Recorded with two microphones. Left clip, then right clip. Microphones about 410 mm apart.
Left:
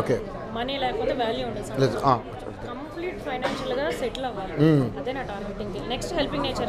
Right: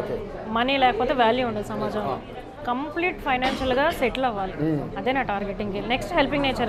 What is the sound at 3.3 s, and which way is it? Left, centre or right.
Speech, right.